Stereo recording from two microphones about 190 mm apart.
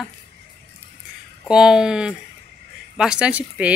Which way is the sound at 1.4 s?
5° right (ahead or behind).